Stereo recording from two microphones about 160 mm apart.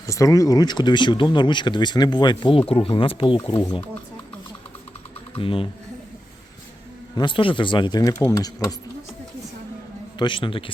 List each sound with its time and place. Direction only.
0.1 s speech: 20° left (ahead or behind)
5.4 s a man's voice: 35° left (ahead or behind)
7.2 s speech: 30° left (ahead or behind)
10.2 s a man's voice: 30° left (ahead or behind)